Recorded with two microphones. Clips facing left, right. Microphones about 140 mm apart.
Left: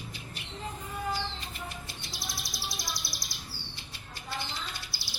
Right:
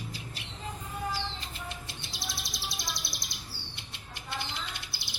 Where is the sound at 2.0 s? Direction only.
25° right (ahead or behind).